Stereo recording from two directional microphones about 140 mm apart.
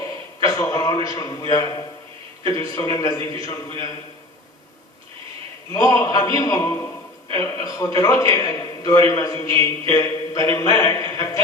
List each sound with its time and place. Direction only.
0.3 s a man's voice: 25° left (ahead or behind)
5.7 s a man's voice: 25° left (ahead or behind)